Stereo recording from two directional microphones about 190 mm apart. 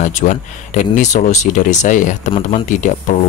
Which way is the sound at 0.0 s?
40° left (ahead or behind).